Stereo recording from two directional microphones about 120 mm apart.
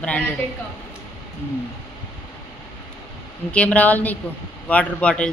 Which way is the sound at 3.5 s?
10° left (ahead or behind).